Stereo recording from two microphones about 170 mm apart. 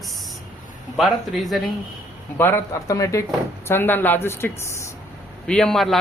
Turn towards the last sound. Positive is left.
turn(degrees=0)  # may be behind; listen again after turning